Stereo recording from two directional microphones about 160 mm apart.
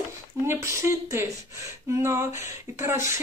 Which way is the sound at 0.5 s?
20° right (ahead or behind).